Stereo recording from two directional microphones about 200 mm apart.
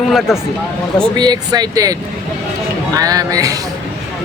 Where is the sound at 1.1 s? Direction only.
20° right (ahead or behind).